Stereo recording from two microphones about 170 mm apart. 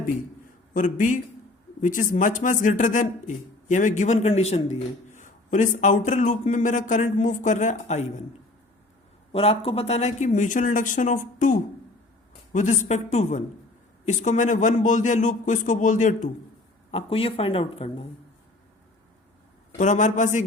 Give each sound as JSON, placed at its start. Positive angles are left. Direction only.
{"t": 0.7, "sound": "speech", "side_deg": 50}
{"t": 9.3, "sound": "a man's voice", "side_deg": 35}
{"t": 12.5, "sound": "speech", "side_deg": 45}
{"t": 16.9, "sound": "speech", "side_deg": 35}
{"t": 19.8, "sound": "speech", "side_deg": 45}